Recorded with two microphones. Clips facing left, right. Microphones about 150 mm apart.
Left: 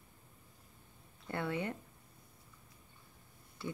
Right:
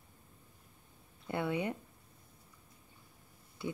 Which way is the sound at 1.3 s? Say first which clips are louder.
Right 3 dB; 15° right (ahead or behind).